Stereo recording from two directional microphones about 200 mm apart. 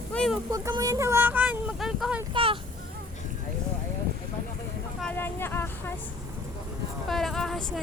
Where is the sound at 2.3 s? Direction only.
25° right (ahead or behind).